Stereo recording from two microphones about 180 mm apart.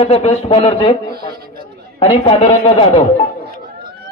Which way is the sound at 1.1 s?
60° right (ahead or behind).